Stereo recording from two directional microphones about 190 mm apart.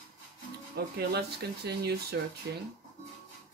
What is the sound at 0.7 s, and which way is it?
Speech, 60° right (ahead or behind).